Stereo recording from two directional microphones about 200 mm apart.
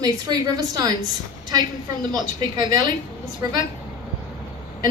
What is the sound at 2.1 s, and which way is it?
A woman's voice, 20° right (ahead or behind).